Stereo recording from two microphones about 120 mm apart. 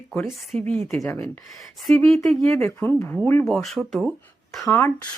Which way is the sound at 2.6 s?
15° left (ahead or behind).